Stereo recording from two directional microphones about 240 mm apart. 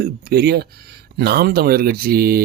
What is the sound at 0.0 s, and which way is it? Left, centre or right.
Speech, right.